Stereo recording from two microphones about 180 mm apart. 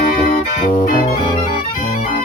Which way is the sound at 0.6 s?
50° left (ahead or behind).